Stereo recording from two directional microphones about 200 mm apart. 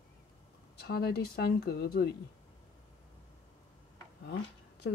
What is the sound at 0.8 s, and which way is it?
Speech, 55° left (ahead or behind).